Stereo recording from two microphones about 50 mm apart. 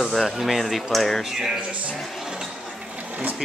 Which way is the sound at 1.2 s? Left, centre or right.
Centre.